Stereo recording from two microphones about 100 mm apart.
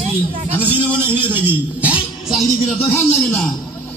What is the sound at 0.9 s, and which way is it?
Speech, 20° right (ahead or behind).